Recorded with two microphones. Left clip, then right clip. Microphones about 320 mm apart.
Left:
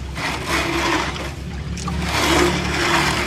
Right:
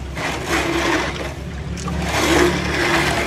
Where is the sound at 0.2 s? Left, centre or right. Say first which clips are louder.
Right 1 dB; centre.